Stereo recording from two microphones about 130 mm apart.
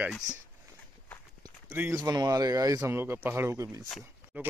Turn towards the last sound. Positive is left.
turn(degrees=-15)  # may be behind; listen again after turning